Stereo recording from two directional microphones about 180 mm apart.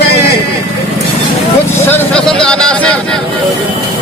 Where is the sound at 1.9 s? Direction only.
5° left (ahead or behind).